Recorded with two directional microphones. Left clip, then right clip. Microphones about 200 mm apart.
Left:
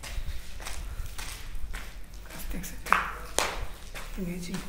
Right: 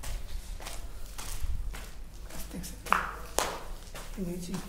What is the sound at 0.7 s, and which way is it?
Walk, 10° right (ahead or behind).